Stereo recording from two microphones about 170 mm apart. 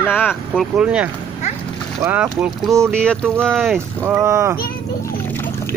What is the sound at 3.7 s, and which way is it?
Speech, 15° right (ahead or behind).